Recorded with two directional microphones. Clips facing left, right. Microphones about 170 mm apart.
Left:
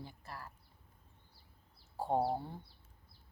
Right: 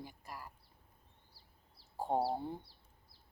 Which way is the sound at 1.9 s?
15° right (ahead or behind).